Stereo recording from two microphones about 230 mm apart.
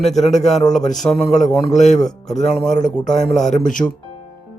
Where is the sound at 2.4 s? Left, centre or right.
Centre.